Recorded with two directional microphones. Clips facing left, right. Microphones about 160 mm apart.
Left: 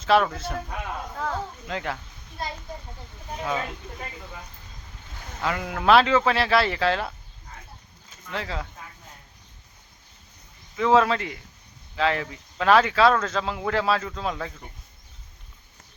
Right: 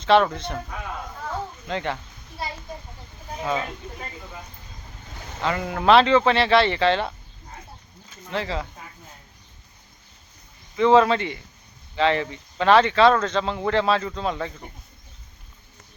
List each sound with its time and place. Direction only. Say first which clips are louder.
0.0 s speech: right 3 dB; 5° left (ahead or behind)
1.2 s a sound: left 5 dB; 90° left
1.6 s speech: right 6 dB; centre (ahead or behind)
2.4 s children playing: right 1 dB; 5° right (ahead or behind)
5.4 s speech: right 2 dB; 5° left (ahead or behind)
8.3 s speech: right 4 dB; centre (ahead or behind)
10.8 s speech: right 3 dB; centre (ahead or behind)